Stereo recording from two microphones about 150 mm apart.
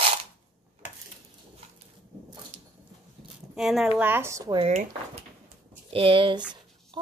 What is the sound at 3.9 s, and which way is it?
Speech, 15° right (ahead or behind).